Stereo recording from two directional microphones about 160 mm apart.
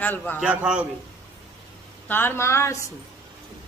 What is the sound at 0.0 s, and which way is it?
Speech, 10° left (ahead or behind).